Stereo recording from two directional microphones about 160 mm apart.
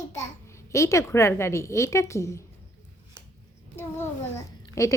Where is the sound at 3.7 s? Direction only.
15° left (ahead or behind).